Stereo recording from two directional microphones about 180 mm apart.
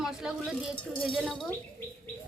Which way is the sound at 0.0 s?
Centre (ahead or behind).